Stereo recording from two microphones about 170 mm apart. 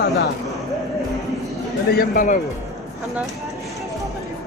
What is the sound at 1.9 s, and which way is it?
Speech, 55° left (ahead or behind).